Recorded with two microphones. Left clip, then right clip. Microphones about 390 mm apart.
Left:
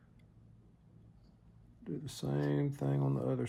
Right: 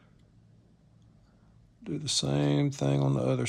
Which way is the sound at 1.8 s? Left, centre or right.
Right.